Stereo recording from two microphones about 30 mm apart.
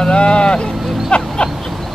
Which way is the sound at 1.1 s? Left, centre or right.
Left.